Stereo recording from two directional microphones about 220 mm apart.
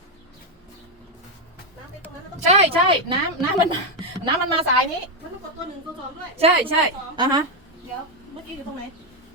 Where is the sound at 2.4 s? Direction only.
30° right (ahead or behind).